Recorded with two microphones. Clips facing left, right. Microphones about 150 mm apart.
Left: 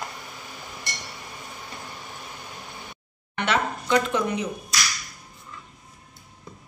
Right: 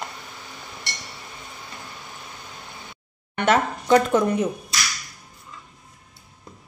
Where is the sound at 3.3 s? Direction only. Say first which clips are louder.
Right 5 dB; 45° right (ahead or behind).